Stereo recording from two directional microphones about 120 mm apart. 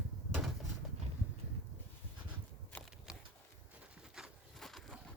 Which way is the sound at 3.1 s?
5° right (ahead or behind).